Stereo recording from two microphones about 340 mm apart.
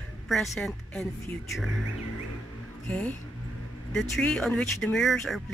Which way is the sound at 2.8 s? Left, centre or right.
Centre.